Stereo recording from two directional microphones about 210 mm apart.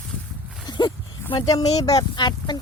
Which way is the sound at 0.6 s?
20° left (ahead or behind).